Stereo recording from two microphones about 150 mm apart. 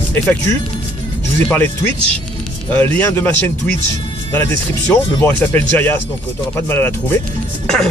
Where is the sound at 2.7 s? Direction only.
15° left (ahead or behind).